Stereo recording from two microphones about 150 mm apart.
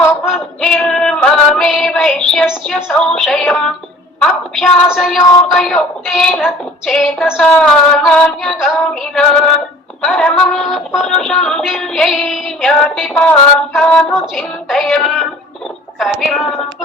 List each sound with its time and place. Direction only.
0.3 s female singing: centre (ahead or behind)
4.2 s speech: 5° left (ahead or behind)